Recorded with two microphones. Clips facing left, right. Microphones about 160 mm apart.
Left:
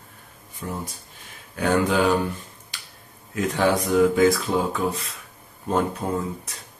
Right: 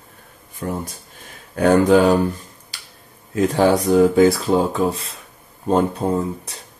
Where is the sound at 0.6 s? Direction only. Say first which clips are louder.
Right 6 dB; 60° right (ahead or behind).